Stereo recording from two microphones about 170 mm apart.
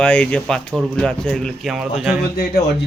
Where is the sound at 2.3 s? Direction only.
65° left (ahead or behind).